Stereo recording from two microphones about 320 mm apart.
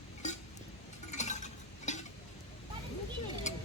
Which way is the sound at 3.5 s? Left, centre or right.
Left.